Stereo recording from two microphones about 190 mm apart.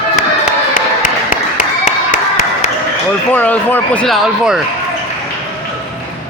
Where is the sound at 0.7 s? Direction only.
45° left (ahead or behind).